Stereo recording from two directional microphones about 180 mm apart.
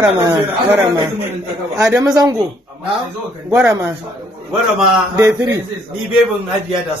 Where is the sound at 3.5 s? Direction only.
15° right (ahead or behind).